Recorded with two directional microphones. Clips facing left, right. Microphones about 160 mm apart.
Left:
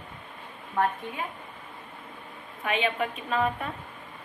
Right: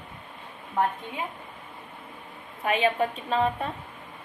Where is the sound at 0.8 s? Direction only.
15° right (ahead or behind).